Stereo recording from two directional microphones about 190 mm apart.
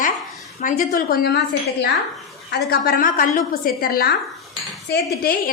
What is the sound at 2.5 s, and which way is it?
A woman's voice, 55° left (ahead or behind).